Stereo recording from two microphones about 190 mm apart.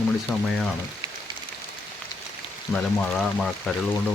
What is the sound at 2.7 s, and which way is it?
Speech, centre (ahead or behind).